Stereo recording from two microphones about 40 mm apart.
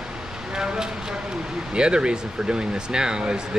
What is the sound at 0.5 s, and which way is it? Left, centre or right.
Speech, centre.